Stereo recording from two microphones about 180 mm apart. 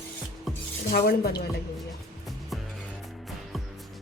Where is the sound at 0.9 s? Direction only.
55° left (ahead or behind).